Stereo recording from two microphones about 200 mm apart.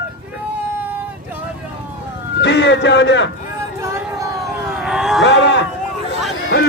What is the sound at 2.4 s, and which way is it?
Speech, 60° left (ahead or behind).